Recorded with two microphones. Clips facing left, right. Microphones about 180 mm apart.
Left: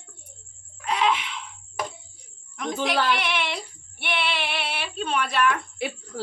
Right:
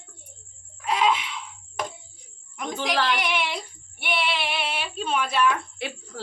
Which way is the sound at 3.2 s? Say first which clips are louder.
Right 1 dB; 10° right (ahead or behind).